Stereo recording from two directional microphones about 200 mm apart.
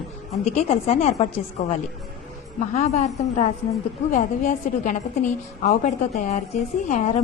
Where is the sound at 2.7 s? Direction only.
35° left (ahead or behind).